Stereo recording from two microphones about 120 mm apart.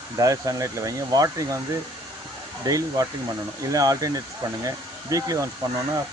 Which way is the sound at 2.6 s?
30° right (ahead or behind).